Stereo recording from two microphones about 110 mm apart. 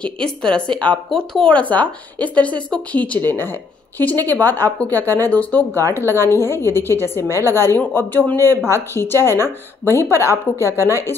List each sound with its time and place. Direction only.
0.0 s a woman's voice: 10° left (ahead or behind); by 11.1 s 25° left (ahead or behind)